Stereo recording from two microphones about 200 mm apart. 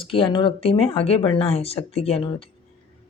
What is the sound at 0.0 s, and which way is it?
A woman's voice, 25° left (ahead or behind).